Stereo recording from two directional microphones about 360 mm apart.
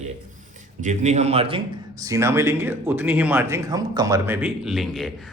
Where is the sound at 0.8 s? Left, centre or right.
Centre.